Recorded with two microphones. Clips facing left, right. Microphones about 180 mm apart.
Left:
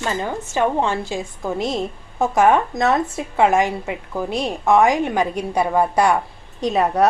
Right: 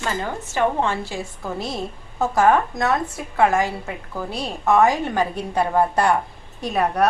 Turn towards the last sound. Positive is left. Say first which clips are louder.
# left 3 dB
turn(degrees=20)  # may be behind; listen again after turning